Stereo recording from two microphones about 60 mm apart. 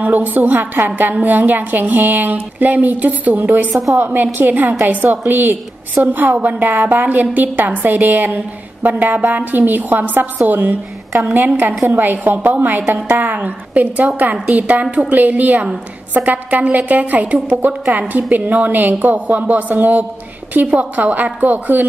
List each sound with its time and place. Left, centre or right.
0.0 s a woman's voice: right